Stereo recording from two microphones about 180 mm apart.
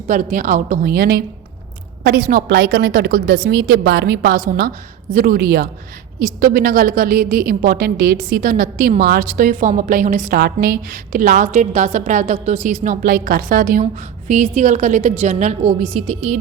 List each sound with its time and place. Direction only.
0.1 s a woman's voice: 45° right (ahead or behind)